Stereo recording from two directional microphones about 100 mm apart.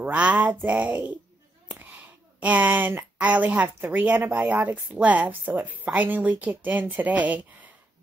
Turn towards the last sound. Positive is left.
turn(degrees=-15)  # may be behind; listen again after turning